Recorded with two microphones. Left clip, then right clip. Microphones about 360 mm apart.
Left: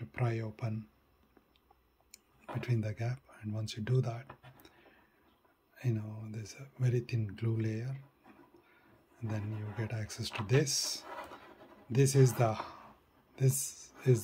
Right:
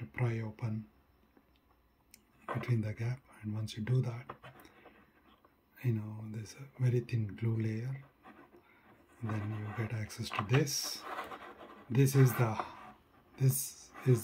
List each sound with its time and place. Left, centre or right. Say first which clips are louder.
0.1 s speech: left 2 dB; centre
2.4 s speech: right 1 dB; centre
5.8 s speech: even; centre
9.3 s speech: right 2 dB; centre